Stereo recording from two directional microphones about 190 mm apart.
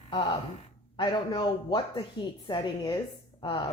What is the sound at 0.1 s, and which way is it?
A man's voice, 25° left (ahead or behind).